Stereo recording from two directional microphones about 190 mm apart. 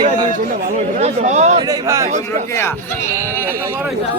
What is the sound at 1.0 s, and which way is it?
Speech, 35° right (ahead or behind).